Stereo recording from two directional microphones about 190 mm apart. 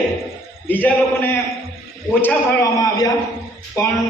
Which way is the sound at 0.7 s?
10° left (ahead or behind).